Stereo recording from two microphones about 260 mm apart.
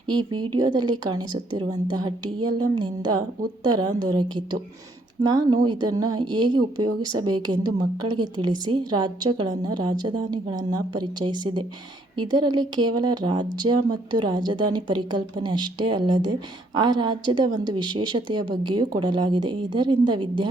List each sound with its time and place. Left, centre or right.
0.1 s a woman's voice: centre